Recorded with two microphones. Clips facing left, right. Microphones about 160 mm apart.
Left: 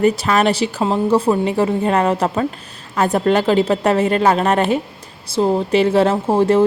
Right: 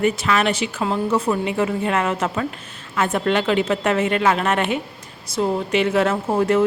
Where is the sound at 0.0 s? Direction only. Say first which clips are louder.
Left 4 dB; 35° left (ahead or behind).